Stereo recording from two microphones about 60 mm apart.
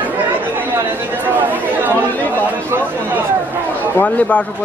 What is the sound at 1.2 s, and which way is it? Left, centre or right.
Chatter, right.